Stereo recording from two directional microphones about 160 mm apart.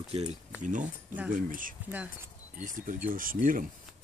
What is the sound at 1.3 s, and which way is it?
Speech, 60° right (ahead or behind).